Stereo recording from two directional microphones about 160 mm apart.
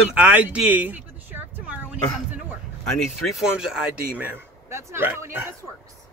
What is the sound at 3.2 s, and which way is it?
Speech, 5° right (ahead or behind).